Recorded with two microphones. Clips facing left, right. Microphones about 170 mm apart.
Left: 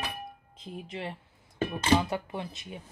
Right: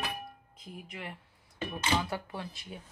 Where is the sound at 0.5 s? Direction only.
25° left (ahead or behind).